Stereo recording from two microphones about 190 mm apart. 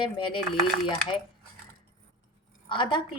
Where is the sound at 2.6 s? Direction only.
25° left (ahead or behind).